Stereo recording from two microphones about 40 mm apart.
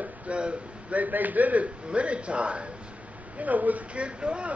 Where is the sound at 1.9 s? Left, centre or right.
Right.